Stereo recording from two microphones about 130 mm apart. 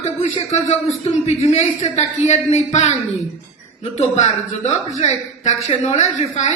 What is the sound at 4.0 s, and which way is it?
A woman's voice, 60° left (ahead or behind).